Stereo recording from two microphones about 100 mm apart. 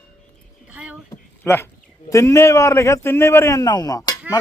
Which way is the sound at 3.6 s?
40° left (ahead or behind).